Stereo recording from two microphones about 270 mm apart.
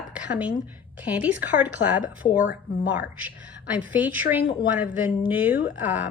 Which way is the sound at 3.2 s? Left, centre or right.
Centre.